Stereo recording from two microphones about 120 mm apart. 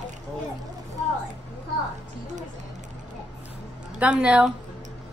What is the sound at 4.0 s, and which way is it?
Speech, 10° right (ahead or behind).